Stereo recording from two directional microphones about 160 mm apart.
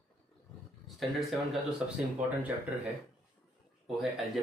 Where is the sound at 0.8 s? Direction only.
Centre (ahead or behind).